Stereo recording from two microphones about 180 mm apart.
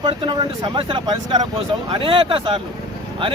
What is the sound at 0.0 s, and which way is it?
Speech, 25° right (ahead or behind).